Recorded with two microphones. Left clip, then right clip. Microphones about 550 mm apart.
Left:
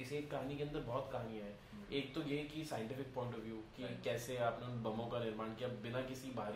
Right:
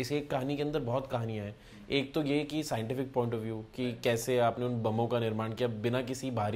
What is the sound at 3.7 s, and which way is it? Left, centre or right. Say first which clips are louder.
Speech: right 11 dB; right.